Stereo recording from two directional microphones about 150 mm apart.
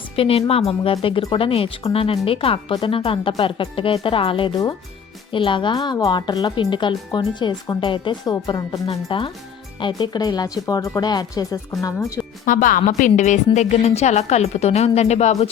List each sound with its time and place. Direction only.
0.2 s speech: 40° left (ahead or behind); by 12.2 s 20° left (ahead or behind)
12.5 s a woman's voice: 65° left (ahead or behind); by 15.4 s 45° left (ahead or behind)